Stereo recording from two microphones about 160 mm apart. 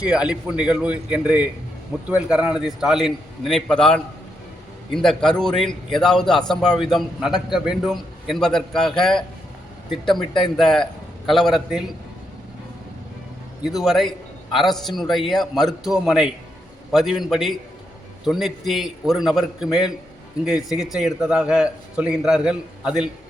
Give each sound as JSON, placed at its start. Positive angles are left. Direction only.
{"t": 0.0, "sound": "a man's voice", "side_deg": -5}
{"t": 13.8, "sound": "a man's voice", "side_deg": 0}